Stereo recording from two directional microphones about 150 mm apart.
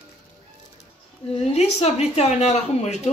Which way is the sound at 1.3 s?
45° left (ahead or behind).